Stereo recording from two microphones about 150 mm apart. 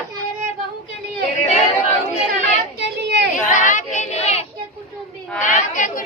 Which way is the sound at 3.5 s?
60° left (ahead or behind).